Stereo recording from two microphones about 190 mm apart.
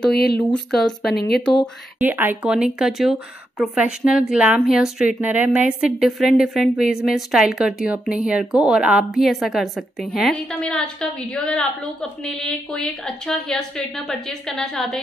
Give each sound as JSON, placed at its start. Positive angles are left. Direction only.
{"t": 0.1, "sound": "speech", "side_deg": 55}
{"t": 0.5, "sound": "speech", "side_deg": 0}
{"t": 2.0, "sound": "speech", "side_deg": -10}